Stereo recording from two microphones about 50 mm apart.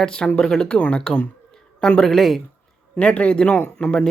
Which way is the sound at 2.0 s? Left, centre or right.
Centre.